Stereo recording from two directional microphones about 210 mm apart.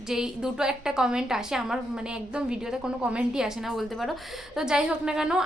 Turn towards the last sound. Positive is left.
turn(degrees=-5)  # may be behind; listen again after turning